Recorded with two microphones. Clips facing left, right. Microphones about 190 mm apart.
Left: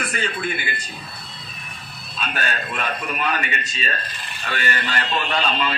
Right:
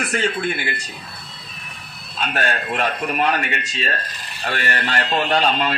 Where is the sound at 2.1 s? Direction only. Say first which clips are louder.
Right 4 dB; 65° right (ahead or behind).